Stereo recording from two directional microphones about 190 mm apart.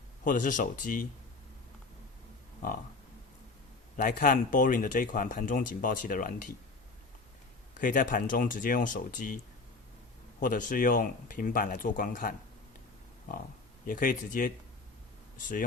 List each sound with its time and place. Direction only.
0.3 s speech: 45° left (ahead or behind)
3.9 s speech: 45° left (ahead or behind)
7.8 s speech: 45° left (ahead or behind)
10.4 s speech: 45° left (ahead or behind)
13.8 s speech: 45° left (ahead or behind)